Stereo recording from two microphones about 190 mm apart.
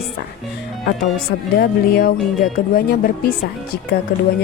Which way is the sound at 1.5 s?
50° left (ahead or behind).